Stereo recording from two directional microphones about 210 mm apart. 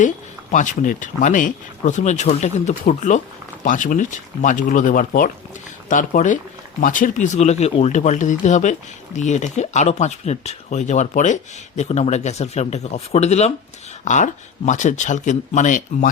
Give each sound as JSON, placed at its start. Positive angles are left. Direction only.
{"t": 0.5, "sound": "speech", "side_deg": 35}